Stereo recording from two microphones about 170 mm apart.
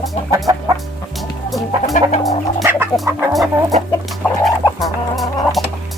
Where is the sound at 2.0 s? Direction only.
50° left (ahead or behind).